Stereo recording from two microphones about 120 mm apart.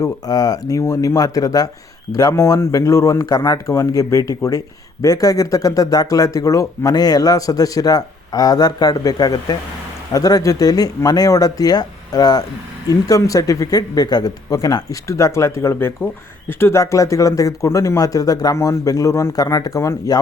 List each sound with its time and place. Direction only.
0.0 s speech: 30° left (ahead or behind)